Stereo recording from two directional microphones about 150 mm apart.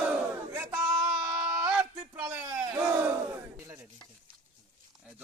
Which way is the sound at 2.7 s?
15° right (ahead or behind).